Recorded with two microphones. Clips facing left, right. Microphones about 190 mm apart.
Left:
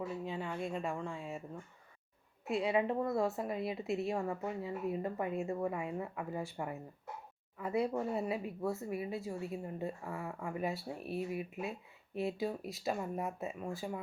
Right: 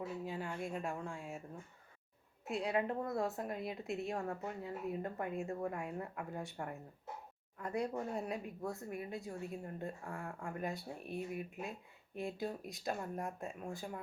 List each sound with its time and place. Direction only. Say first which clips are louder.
0.3 s speech: left 3 dB; centre (ahead or behind)
2.4 s a woman's voice: left 4 dB; centre (ahead or behind)